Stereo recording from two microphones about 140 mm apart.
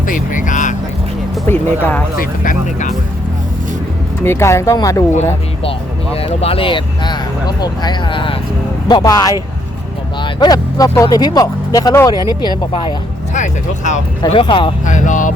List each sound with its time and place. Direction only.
0.0 s speech: 70° left (ahead or behind)
1.5 s speech: 10° left (ahead or behind)
2.1 s speech: 75° left (ahead or behind)
4.2 s speech: 20° left (ahead or behind)
6.1 s speech: 45° left (ahead or behind)
8.9 s speech: 25° left (ahead or behind)
10.4 s speech: 25° left (ahead or behind)
13.3 s speech: 60° left (ahead or behind)
14.3 s speech: 40° left (ahead or behind)
14.8 s speech: 65° left (ahead or behind)